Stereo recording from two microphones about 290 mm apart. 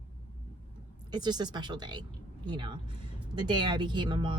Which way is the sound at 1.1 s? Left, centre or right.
Centre.